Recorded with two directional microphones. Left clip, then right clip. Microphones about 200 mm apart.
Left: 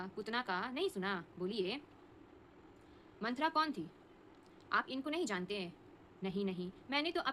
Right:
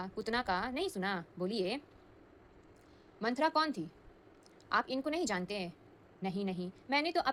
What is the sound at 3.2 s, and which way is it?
A woman's voice, 25° right (ahead or behind).